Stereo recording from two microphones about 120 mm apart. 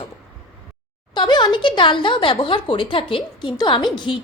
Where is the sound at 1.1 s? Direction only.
40° left (ahead or behind).